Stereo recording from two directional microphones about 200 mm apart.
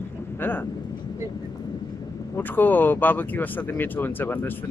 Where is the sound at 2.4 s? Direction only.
10° left (ahead or behind).